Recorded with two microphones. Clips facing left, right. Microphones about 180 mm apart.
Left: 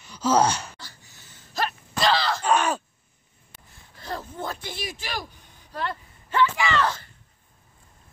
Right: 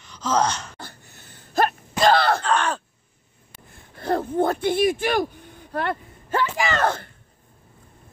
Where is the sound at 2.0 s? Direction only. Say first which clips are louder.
Right 5 dB; 55° right (ahead or behind).